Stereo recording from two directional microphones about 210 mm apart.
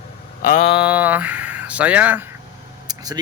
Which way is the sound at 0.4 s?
40° left (ahead or behind).